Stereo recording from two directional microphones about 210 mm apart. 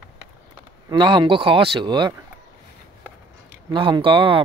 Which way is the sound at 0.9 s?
20° right (ahead or behind).